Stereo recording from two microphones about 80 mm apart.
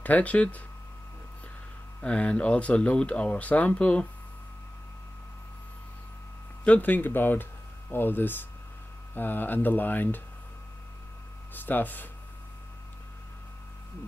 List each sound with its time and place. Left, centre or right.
0.0 s speech: centre
2.0 s speech: centre
6.6 s speech: centre
11.5 s speech: left